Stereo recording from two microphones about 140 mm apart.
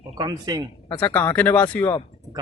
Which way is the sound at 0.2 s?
25° right (ahead or behind).